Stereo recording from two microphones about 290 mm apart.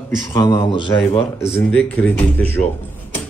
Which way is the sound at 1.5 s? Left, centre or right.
Centre.